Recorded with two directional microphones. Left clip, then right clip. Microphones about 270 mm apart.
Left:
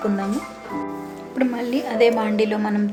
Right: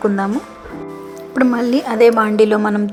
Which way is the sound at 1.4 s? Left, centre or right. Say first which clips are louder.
Right 7 dB; right.